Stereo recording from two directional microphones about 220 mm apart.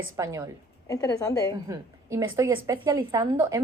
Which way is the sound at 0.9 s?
15° left (ahead or behind).